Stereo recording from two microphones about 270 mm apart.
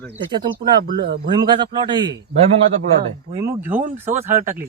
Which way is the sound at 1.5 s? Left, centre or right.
Centre.